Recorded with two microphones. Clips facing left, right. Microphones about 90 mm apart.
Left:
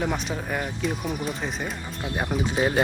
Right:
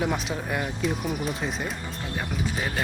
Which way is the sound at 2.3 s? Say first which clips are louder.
Left 8 dB; 35° left (ahead or behind).